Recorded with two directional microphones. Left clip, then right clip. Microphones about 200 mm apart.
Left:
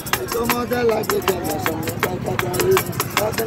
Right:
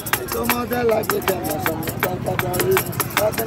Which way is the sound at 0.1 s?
15° right (ahead or behind).